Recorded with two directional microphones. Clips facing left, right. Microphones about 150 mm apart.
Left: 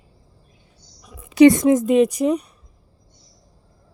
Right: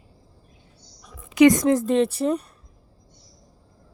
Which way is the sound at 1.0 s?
10° left (ahead or behind).